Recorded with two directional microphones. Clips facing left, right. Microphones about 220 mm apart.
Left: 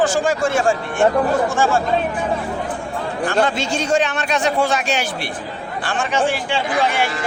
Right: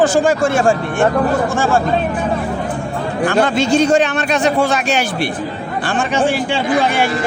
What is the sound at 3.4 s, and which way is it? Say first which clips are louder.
Speech: right 7 dB; 60° right (ahead or behind).